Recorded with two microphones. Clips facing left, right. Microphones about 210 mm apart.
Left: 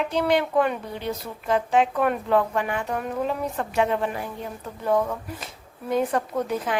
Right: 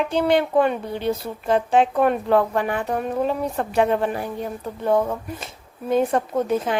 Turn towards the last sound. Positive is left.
turn(degrees=-25)  # may be behind; listen again after turning